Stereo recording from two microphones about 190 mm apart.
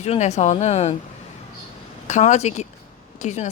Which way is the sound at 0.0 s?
35° left (ahead or behind).